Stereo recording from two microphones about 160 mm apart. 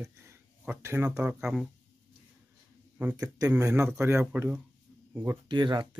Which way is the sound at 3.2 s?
20° right (ahead or behind).